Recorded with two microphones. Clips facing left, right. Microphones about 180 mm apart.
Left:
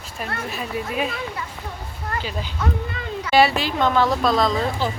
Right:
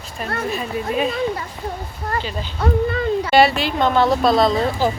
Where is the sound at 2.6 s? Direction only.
35° right (ahead or behind).